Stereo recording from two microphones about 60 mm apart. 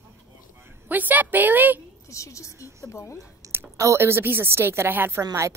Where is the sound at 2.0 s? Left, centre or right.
Left.